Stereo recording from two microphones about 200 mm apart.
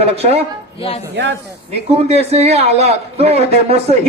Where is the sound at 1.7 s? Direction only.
30° right (ahead or behind).